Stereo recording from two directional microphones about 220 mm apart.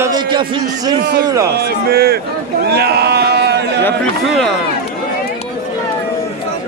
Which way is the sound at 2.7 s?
45° right (ahead or behind).